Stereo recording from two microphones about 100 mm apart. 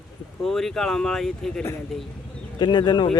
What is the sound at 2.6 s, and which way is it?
Speech, 50° left (ahead or behind).